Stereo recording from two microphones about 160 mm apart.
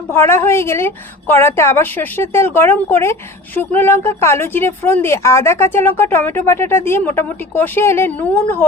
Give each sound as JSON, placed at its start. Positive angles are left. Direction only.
{"t": 0.1, "sound": "a woman's voice", "side_deg": 15}